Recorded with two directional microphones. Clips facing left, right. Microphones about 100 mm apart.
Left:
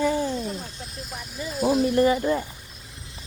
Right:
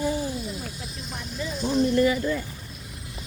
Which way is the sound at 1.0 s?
5° left (ahead or behind).